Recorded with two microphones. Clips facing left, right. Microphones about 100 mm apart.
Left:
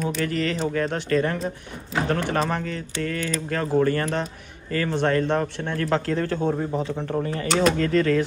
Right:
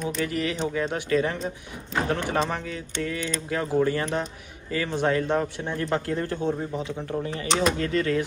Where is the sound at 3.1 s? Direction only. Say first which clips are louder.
Left 3 dB; centre (ahead or behind).